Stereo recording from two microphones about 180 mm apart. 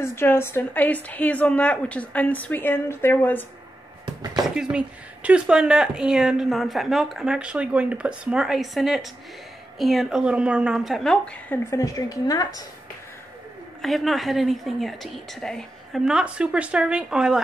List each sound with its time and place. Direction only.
0.0 s a woman's voice: 15° left (ahead or behind)
4.0 s a sound: 25° right (ahead or behind)
4.6 s speech: 5° right (ahead or behind); by 12.4 s 20° left (ahead or behind)
13.7 s speech: centre (ahead or behind)